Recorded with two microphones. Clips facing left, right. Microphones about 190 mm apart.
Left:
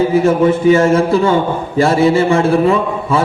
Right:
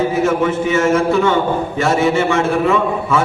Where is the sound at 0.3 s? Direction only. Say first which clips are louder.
Left 6 dB; 35° left (ahead or behind).